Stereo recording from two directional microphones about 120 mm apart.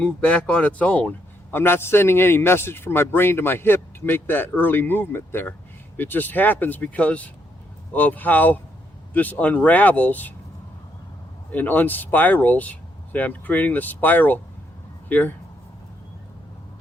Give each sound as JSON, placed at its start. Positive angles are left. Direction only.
{"t": 0.0, "sound": "a man's voice", "side_deg": 10}
{"t": 11.5, "sound": "a man's voice", "side_deg": 15}